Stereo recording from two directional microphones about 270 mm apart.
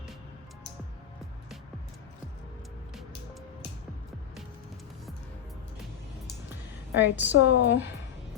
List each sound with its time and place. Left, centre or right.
7.0 s a woman's voice: centre
7.3 s a woman's voice: left